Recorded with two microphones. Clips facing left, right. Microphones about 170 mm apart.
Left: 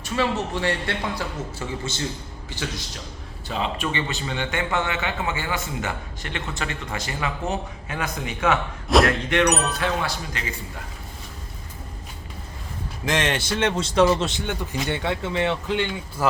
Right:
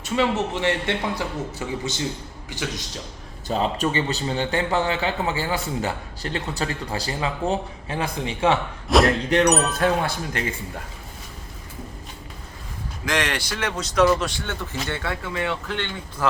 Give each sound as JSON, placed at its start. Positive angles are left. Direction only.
{"t": 0.0, "sound": "a man's voice", "side_deg": -20}
{"t": 3.5, "sound": "a man's voice", "side_deg": -40}
{"t": 8.9, "sound": "speech", "side_deg": 0}
{"t": 9.7, "sound": "speech", "side_deg": -50}
{"t": 13.1, "sound": "a man's voice", "side_deg": 25}